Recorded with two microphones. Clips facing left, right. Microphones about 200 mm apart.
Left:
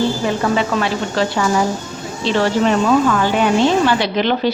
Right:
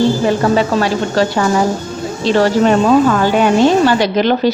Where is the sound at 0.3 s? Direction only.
40° right (ahead or behind).